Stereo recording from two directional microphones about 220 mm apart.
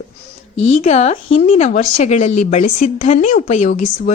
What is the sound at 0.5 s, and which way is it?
Speech, 60° left (ahead or behind).